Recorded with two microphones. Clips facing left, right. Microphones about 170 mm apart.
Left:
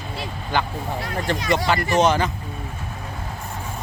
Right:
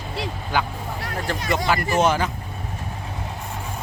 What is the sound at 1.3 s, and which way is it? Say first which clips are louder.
Speech: left 2 dB; 5° right (ahead or behind).